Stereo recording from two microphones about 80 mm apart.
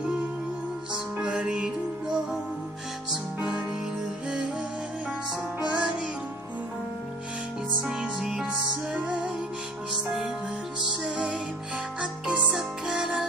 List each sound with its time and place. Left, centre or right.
0.9 s music: centre
3.1 s music: centre
5.6 s music: centre
7.8 s music: centre
12.0 s music: centre